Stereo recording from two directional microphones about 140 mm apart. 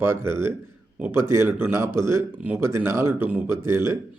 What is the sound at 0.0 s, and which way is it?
Speech, 15° right (ahead or behind).